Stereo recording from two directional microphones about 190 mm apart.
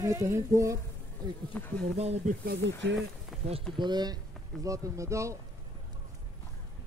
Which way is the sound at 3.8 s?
20° right (ahead or behind).